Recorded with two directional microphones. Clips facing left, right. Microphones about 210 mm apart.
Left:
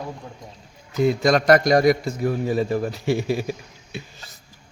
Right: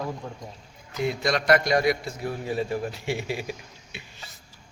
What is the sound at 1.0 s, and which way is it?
A man's voice, 45° left (ahead or behind).